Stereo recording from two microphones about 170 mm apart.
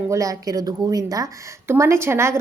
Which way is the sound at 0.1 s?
20° right (ahead or behind).